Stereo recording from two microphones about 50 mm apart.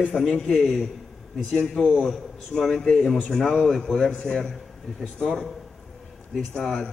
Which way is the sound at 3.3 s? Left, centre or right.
Centre.